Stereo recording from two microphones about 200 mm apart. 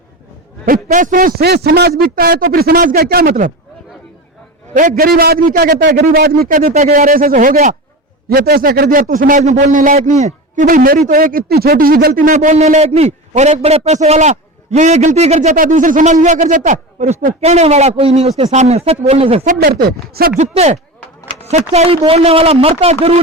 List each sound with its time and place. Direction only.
0.6 s a man's voice: 45° right (ahead or behind)
4.7 s a man's voice: 40° right (ahead or behind)
6.6 s a man's voice: 35° right (ahead or behind)
19.5 s a man's voice: 50° right (ahead or behind)
20.4 s a man's voice: 35° right (ahead or behind)